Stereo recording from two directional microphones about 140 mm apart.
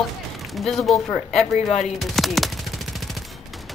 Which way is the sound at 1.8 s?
Centre (ahead or behind).